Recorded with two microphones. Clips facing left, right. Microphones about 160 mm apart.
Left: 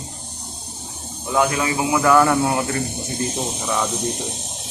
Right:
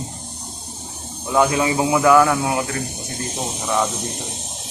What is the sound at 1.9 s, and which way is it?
Speech, 5° right (ahead or behind).